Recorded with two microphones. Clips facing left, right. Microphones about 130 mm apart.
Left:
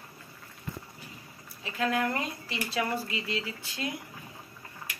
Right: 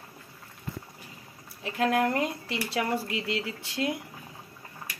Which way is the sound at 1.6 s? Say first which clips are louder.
Right 4 dB; 55° right (ahead or behind).